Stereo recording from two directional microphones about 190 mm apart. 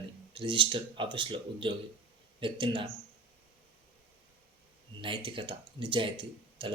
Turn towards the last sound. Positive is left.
turn(degrees=-25)  # may be behind; listen again after turning